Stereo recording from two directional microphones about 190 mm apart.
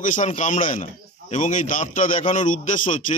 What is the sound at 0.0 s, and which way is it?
A man's voice, 40° left (ahead or behind).